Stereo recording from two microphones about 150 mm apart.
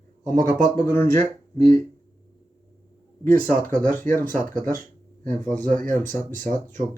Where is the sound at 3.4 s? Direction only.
15° left (ahead or behind).